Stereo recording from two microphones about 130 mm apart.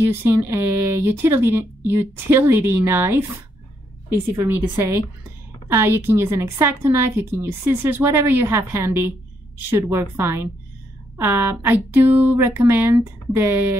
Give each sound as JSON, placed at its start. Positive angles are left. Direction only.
{"t": 0.1, "sound": "speech", "side_deg": -15}
{"t": 4.4, "sound": "a woman's voice", "side_deg": -20}